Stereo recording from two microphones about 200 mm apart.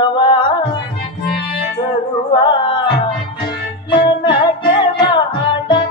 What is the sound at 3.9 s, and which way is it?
Music, 25° left (ahead or behind).